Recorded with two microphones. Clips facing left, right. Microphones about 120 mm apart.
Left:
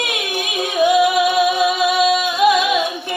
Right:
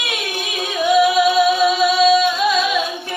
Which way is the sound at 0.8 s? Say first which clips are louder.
Even; 15° left (ahead or behind).